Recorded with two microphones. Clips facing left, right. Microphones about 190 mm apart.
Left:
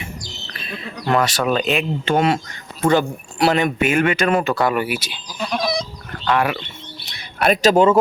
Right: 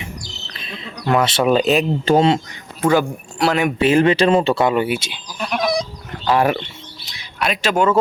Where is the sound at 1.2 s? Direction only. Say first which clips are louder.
Right 3 dB; 25° right (ahead or behind).